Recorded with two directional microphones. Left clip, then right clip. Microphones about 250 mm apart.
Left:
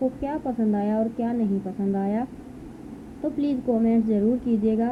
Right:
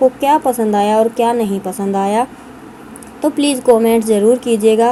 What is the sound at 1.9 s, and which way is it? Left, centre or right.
Speech, centre.